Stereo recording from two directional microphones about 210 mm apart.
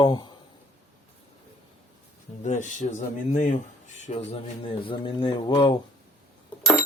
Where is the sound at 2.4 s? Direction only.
35° left (ahead or behind).